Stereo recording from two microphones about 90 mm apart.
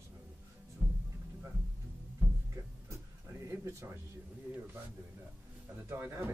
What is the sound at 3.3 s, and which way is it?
Speech, 35° right (ahead or behind).